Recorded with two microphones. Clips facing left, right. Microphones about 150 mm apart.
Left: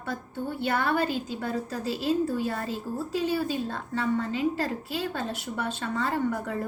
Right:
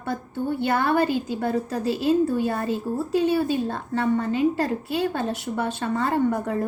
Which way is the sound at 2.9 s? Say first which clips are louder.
Right 6 dB; 70° right (ahead or behind).